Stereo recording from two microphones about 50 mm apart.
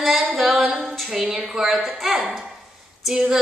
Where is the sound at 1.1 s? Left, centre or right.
Centre.